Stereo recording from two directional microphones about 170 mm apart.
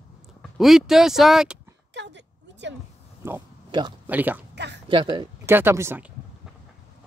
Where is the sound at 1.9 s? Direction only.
90° right.